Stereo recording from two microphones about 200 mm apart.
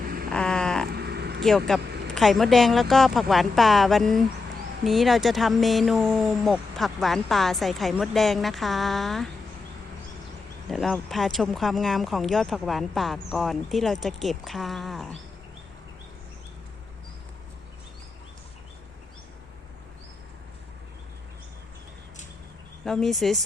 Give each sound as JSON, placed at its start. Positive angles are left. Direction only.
{"t": 0.3, "sound": "vehicle", "side_deg": 5}
{"t": 0.9, "sound": "a sound", "side_deg": -55}
{"t": 1.4, "sound": "speech", "side_deg": 0}
{"t": 10.7, "sound": "speech", "side_deg": 0}
{"t": 22.8, "sound": "speech", "side_deg": 0}